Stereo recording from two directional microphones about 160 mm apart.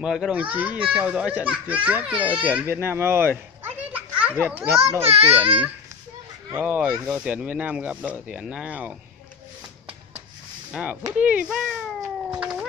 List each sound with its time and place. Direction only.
0.0 s a child's voice: 5° right (ahead or behind)
2.7 s children playing: 15° right (ahead or behind)
4.4 s a child's voice: 10° right (ahead or behind)
5.0 s a child's voice: 40° right (ahead or behind)
6.5 s a child's voice: 10° right (ahead or behind)
10.7 s a child's voice: 5° right (ahead or behind)
12.4 s cat: 5° right (ahead or behind)